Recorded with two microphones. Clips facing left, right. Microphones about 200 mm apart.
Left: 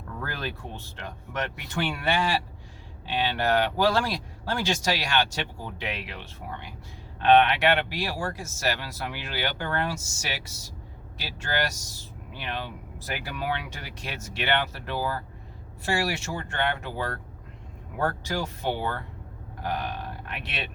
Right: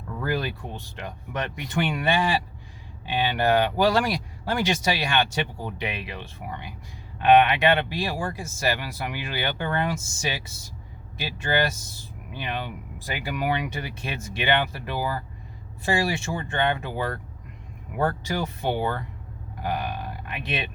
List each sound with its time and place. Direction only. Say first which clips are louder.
0.2 s speech: right 7 dB; 15° right (ahead or behind)